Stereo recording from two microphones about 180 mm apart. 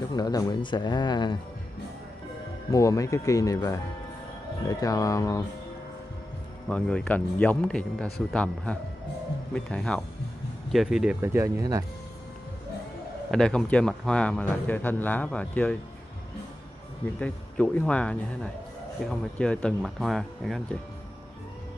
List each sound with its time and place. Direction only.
0.1 s speech: 20° left (ahead or behind)
2.7 s speech: 20° left (ahead or behind)
6.7 s speech: 5° left (ahead or behind)
11.1 s speech: 15° right (ahead or behind)
13.3 s a man's voice: 5° left (ahead or behind)
17.2 s a man's voice: 5° left (ahead or behind)